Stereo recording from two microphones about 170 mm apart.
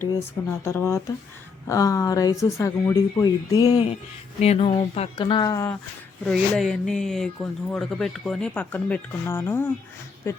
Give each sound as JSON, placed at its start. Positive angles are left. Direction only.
{"t": 0.6, "sound": "speech", "side_deg": 15}
{"t": 4.4, "sound": "speech", "side_deg": 40}
{"t": 6.2, "sound": "speech", "side_deg": 0}